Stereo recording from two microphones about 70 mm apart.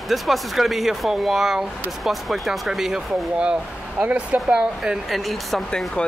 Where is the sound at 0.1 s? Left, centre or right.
Centre.